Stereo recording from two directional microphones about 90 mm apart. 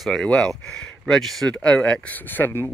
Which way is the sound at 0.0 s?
10° left (ahead or behind).